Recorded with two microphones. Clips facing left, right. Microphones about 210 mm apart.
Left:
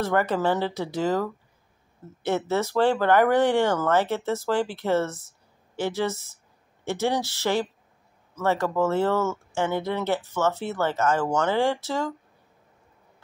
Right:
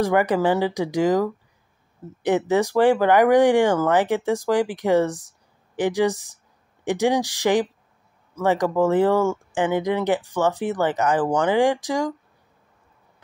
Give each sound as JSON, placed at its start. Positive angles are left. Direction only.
{"t": 0.0, "sound": "speech", "side_deg": -15}